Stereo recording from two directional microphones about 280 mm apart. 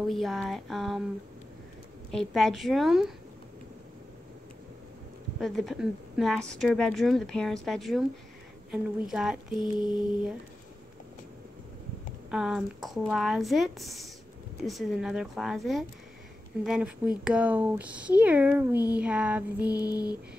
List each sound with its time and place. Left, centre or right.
0.0 s speech: centre
2.0 s speech: centre
5.4 s speech: centre
9.1 s speech: centre
9.6 s mantra: centre
12.3 s speech: centre
19.7 s mantra: centre